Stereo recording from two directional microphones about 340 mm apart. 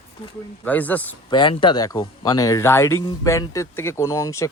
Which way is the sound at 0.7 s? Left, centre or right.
Centre.